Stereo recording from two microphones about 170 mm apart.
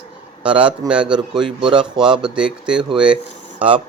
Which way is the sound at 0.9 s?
5° right (ahead or behind).